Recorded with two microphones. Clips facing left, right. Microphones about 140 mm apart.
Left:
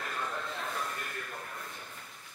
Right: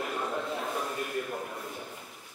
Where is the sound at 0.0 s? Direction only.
15° right (ahead or behind).